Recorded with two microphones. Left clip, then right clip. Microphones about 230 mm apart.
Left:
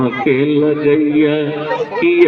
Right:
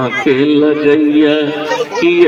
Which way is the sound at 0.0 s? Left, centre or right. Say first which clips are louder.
Right 2 dB; right.